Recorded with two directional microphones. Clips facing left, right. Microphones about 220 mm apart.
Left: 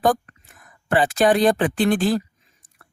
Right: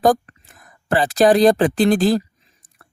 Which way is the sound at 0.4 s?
35° right (ahead or behind).